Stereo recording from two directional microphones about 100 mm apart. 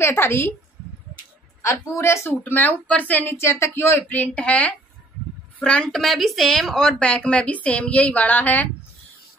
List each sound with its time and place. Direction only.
0.0 s a woman's voice: 25° left (ahead or behind)
1.6 s a woman's voice: 30° left (ahead or behind)